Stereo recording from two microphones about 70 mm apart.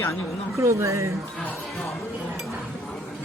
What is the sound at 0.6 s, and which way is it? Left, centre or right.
Speech, right.